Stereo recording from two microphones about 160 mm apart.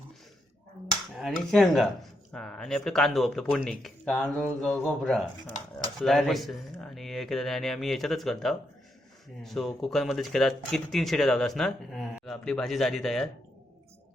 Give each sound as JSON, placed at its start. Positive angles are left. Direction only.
{"t": 1.1, "sound": "speech", "side_deg": 0}